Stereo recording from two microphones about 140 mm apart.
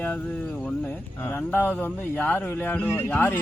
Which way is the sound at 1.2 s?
15° left (ahead or behind).